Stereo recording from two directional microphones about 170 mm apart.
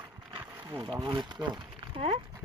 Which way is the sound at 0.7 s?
25° right (ahead or behind).